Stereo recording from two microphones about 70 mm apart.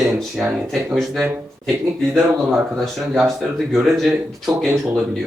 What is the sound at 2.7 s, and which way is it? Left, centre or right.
Speech, centre.